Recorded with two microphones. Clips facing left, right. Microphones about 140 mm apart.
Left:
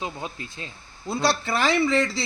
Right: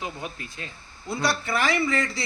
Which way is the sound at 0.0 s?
25° left (ahead or behind).